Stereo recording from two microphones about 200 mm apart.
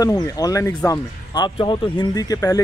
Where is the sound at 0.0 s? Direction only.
20° left (ahead or behind).